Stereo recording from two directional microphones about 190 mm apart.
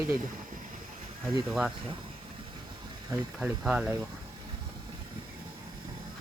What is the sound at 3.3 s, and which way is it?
Speech, 5° right (ahead or behind).